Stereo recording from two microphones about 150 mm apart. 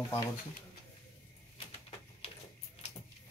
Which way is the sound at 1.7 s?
40° left (ahead or behind).